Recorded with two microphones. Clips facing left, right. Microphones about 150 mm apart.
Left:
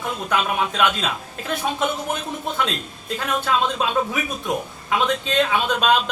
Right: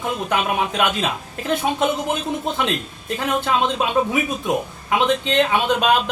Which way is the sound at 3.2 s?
15° right (ahead or behind).